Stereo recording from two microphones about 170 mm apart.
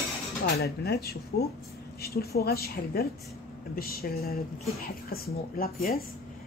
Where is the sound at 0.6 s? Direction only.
65° left (ahead or behind).